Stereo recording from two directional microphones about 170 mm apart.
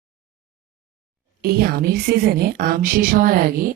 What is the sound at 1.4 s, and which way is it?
A woman's voice, 65° right (ahead or behind).